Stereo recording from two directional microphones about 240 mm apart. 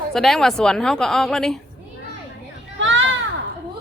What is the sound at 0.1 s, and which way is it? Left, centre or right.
A woman's voice, centre.